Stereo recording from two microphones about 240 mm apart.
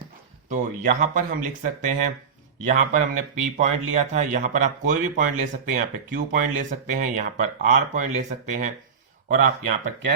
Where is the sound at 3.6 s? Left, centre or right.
Right.